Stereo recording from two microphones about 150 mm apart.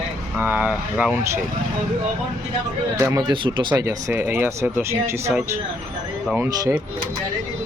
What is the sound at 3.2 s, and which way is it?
Speech, 35° right (ahead or behind).